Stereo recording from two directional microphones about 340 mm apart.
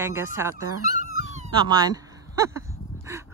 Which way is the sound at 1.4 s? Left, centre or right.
Centre.